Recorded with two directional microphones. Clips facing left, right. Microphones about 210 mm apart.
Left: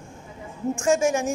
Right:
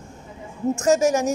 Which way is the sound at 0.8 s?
40° right (ahead or behind).